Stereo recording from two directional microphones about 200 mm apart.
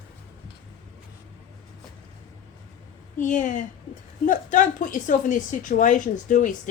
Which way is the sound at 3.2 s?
40° left (ahead or behind).